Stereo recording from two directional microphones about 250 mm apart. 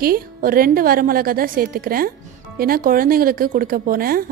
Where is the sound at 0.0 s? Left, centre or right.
Right.